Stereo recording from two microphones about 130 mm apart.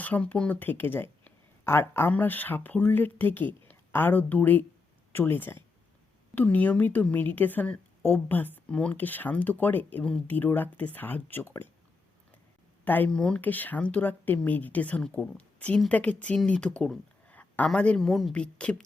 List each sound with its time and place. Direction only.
0.0 s a woman's voice: 10° left (ahead or behind)
12.8 s a woman's voice: 15° left (ahead or behind)